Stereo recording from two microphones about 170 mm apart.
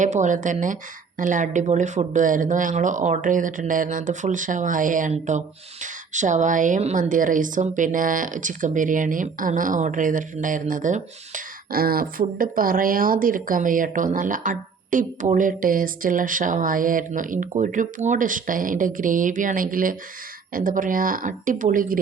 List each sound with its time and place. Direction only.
0.0 s a woman's voice: 45° right (ahead or behind)